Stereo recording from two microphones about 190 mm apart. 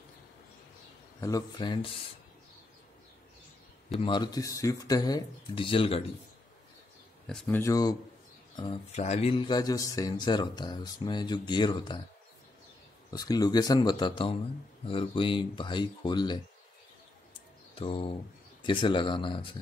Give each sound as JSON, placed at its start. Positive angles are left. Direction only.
{"t": 1.2, "sound": "speech", "side_deg": 20}
{"t": 4.0, "sound": "speech", "side_deg": 25}
{"t": 7.4, "sound": "speech", "side_deg": 15}
{"t": 8.9, "sound": "speech", "side_deg": 35}
{"t": 13.1, "sound": "speech", "side_deg": 20}
{"t": 17.7, "sound": "speech", "side_deg": 30}